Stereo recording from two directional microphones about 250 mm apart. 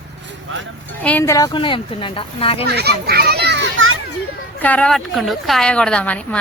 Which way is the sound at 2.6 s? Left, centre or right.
Right.